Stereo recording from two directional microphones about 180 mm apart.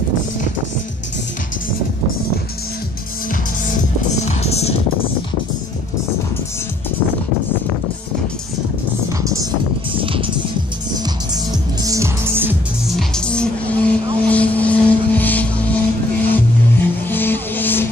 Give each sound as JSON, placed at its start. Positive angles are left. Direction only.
{"t": 4.2, "sound": "music", "side_deg": 35}
{"t": 9.2, "sound": "music", "side_deg": -20}
{"t": 9.9, "sound": "music", "side_deg": -30}
{"t": 11.8, "sound": "music", "side_deg": -15}
{"t": 12.9, "sound": "music", "side_deg": 5}